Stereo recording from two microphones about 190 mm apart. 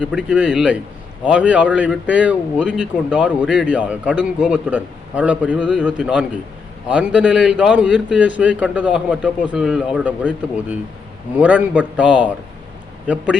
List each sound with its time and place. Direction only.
0.0 s a man's voice: 5° right (ahead or behind)